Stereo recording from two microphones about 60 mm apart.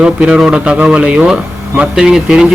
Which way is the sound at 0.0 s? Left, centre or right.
Centre.